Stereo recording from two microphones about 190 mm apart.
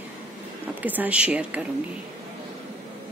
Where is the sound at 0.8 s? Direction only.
10° right (ahead or behind).